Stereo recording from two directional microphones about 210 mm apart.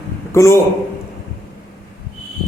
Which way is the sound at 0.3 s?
15° left (ahead or behind).